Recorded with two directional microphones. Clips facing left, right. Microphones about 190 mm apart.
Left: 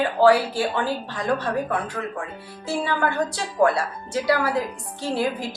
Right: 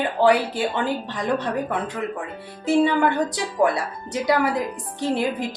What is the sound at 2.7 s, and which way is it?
Speech, 20° right (ahead or behind).